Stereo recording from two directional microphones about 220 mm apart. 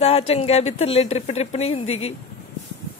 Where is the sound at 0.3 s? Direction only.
30° left (ahead or behind).